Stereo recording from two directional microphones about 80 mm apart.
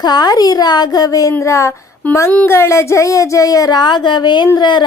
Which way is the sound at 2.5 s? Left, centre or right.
Left.